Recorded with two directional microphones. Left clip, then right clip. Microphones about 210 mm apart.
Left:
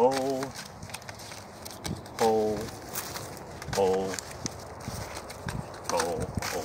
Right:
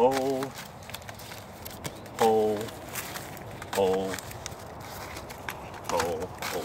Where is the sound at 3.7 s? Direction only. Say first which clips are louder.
Even; 5° left (ahead or behind).